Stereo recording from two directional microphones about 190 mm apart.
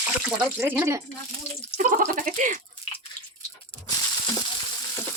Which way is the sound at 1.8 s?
45° right (ahead or behind).